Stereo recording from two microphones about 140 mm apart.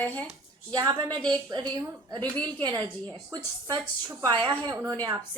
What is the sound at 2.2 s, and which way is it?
Speech, 10° left (ahead or behind).